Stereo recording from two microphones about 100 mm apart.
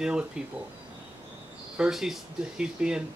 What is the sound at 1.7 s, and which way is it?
Speech, 5° right (ahead or behind).